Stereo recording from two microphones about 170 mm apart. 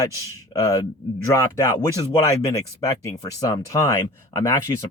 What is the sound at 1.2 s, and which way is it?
Speech, 15° left (ahead or behind).